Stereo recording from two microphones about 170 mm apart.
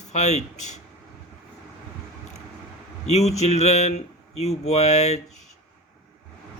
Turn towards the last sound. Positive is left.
turn(degrees=40)  # may be behind; listen again after turning